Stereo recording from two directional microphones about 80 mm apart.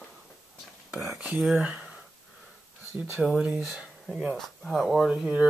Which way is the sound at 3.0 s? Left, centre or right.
Centre.